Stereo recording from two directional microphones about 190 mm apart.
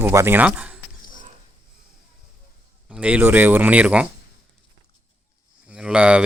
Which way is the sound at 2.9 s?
5° right (ahead or behind).